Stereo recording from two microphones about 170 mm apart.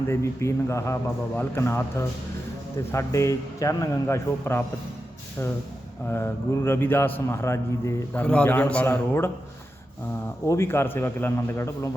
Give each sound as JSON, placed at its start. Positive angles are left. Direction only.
{"t": 0.1, "sound": "a man's voice", "side_deg": 15}
{"t": 6.1, "sound": "a man's voice", "side_deg": 15}
{"t": 10.4, "sound": "a man's voice", "side_deg": 15}